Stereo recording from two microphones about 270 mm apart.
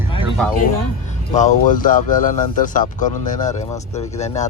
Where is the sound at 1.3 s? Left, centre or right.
Left.